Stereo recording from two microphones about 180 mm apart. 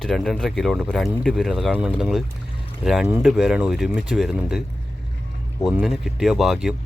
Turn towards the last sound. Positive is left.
turn(degrees=-5)  # may be behind; listen again after turning